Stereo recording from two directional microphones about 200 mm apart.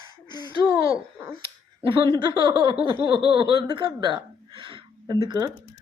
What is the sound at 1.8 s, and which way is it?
A woman's voice, 25° right (ahead or behind).